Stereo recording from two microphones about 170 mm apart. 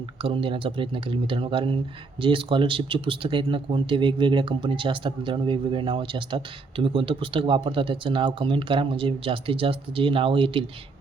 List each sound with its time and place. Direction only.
0.2 s speech: 30° right (ahead or behind)